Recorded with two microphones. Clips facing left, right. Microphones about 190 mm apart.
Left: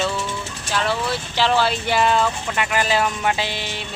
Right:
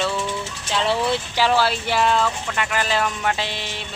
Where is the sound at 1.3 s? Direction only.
10° right (ahead or behind).